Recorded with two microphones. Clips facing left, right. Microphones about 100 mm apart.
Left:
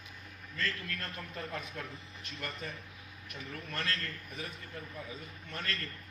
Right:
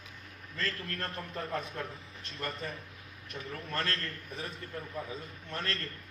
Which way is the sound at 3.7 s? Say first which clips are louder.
Right 3 dB; 35° right (ahead or behind).